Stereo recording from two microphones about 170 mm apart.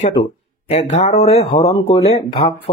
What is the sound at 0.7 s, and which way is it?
Speech, 40° left (ahead or behind).